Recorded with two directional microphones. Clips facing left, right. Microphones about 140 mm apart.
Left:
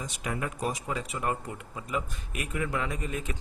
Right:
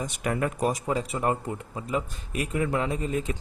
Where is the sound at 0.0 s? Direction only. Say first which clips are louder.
Right 6 dB; 55° right (ahead or behind).